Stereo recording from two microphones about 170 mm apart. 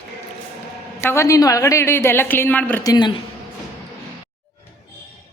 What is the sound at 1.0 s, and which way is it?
A woman's voice, 15° left (ahead or behind).